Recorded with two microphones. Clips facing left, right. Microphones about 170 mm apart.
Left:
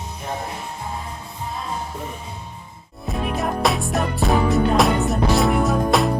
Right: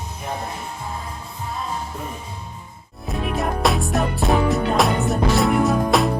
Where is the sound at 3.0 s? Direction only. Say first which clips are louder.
Even; centre (ahead or behind).